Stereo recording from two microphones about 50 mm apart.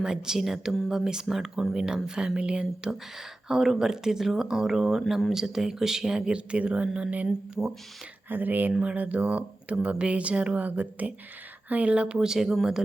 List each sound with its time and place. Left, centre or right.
0.0 s speech: centre
3.2 s speech: centre
8.3 s speech: right
8.8 s speech: right; by 12.5 s centre